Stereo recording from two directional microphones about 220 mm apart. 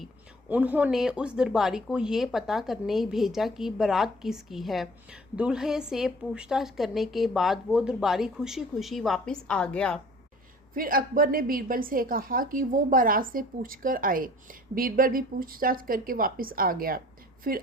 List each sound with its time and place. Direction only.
0.0 s speech: 5° right (ahead or behind)
10.8 s a woman's voice: 40° right (ahead or behind)